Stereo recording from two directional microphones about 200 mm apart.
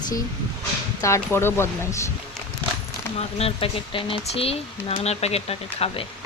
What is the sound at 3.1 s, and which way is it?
Speech, 30° left (ahead or behind).